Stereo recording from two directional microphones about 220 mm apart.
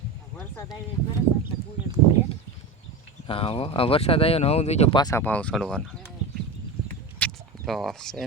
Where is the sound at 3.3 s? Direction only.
25° left (ahead or behind); by 6.1 s 5° left (ahead or behind).